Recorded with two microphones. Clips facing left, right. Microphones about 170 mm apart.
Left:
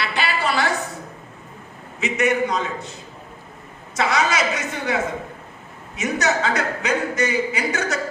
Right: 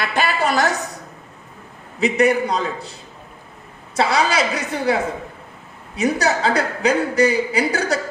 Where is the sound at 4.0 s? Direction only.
30° right (ahead or behind).